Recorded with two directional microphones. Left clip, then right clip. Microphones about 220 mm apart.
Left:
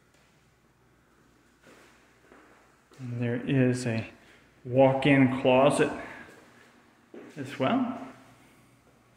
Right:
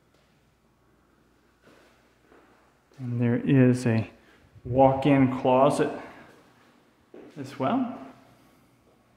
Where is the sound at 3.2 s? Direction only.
40° right (ahead or behind).